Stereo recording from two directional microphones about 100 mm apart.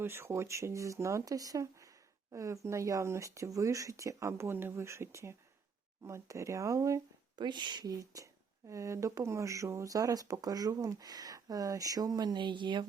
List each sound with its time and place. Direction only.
0.0 s speech: 25° right (ahead or behind)
7.3 s speech: 50° right (ahead or behind)